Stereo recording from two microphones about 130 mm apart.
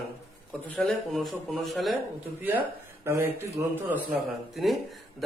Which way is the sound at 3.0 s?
20° right (ahead or behind).